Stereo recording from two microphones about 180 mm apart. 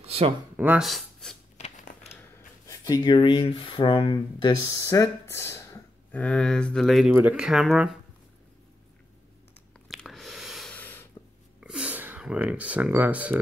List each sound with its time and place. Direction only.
0.0 s a sound: 30° right (ahead or behind)
0.6 s speech: 5° right (ahead or behind)
1.6 s a sound: 40° left (ahead or behind)
2.6 s speech: 20° left (ahead or behind); by 8.0 s 5° right (ahead or behind)
9.8 s biting: centre (ahead or behind)
11.6 s speech: 5° right (ahead or behind)